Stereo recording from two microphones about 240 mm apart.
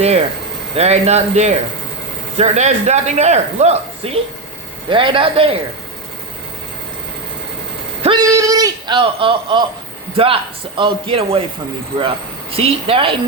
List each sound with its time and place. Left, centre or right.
0.8 s a man's voice: right
8.2 s a man's voice: centre